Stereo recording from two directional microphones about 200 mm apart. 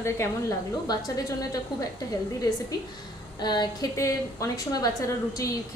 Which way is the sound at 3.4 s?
20° left (ahead or behind).